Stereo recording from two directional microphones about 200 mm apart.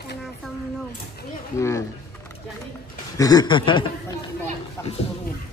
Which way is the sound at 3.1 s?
20° left (ahead or behind).